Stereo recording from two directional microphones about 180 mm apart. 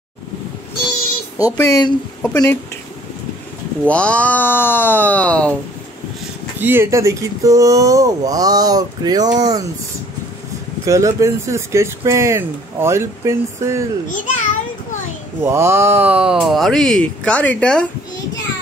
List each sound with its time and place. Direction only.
1.4 s speech: 20° left (ahead or behind)
2.2 s speech: 5° left (ahead or behind)
3.8 s speech: 5° left (ahead or behind)
6.6 s speech: 10° right (ahead or behind)
10.9 s speech: 15° right (ahead or behind)
14.0 s a child's voice: 45° left (ahead or behind)
15.4 s speech: 15° right (ahead or behind); by 17.8 s 5° left (ahead or behind)